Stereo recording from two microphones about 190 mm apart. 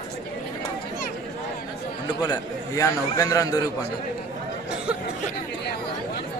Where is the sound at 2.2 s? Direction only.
20° left (ahead or behind).